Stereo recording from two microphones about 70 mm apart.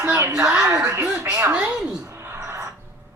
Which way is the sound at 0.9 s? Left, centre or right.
Right.